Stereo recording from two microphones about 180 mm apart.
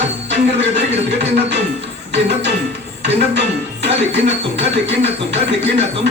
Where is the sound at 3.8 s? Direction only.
75° right (ahead or behind).